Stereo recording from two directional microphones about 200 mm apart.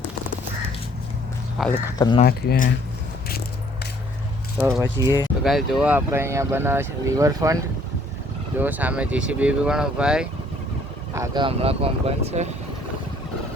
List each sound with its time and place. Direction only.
1.6 s speech: centre (ahead or behind)
2.0 s speech: 20° left (ahead or behind)
2.2 s speech: 50° left (ahead or behind)
4.8 s speech: 15° right (ahead or behind)
5.4 s speech: centre (ahead or behind)
11.1 s speech: 15° right (ahead or behind)
11.4 s speech: 30° right (ahead or behind)